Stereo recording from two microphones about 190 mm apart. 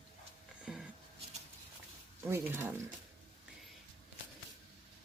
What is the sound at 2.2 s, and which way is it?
Speech, 10° right (ahead or behind).